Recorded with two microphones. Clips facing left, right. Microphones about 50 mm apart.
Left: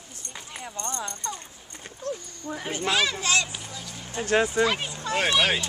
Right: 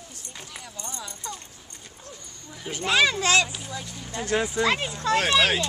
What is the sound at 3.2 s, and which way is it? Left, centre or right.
Speech, right.